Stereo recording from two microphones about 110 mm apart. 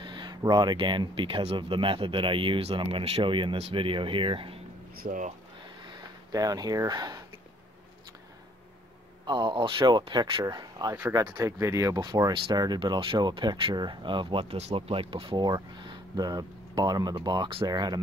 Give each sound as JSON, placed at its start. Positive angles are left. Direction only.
{"t": 0.0, "sound": "speech", "side_deg": -45}
{"t": 3.5, "sound": "speech", "side_deg": -65}
{"t": 5.9, "sound": "a sound", "side_deg": -35}
{"t": 9.2, "sound": "speech", "side_deg": -45}
{"t": 12.0, "sound": "speech", "side_deg": -40}
{"t": 14.6, "sound": "speech", "side_deg": -70}